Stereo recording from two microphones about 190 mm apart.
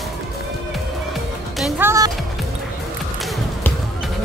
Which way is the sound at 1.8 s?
15° right (ahead or behind).